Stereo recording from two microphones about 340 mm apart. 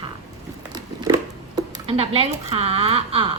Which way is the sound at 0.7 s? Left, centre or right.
Centre.